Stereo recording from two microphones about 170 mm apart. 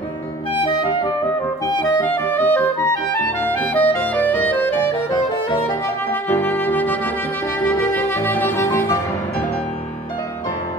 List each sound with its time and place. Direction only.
0.6 s clarinet: 30° left (ahead or behind)
2.0 s music: 10° left (ahead or behind)
3.4 s clarinet: 10° left (ahead or behind)
6.2 s brass instrument: 10° left (ahead or behind)
7.6 s music: 10° left (ahead or behind)